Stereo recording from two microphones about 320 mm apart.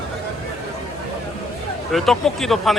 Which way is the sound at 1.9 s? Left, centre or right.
Centre.